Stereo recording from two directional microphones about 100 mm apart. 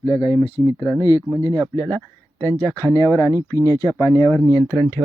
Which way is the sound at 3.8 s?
35° left (ahead or behind).